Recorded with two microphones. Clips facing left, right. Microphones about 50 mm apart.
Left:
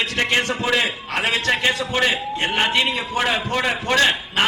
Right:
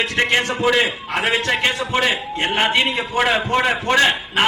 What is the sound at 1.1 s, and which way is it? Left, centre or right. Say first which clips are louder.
A man's voice: right 1 dB; centre.